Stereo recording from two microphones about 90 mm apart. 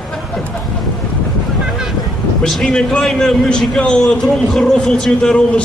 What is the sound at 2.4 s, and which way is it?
A man's voice, 10° left (ahead or behind).